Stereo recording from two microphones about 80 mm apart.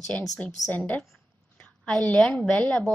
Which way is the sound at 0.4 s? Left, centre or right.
Centre.